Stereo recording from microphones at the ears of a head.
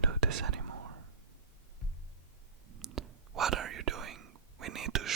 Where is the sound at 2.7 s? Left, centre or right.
Right.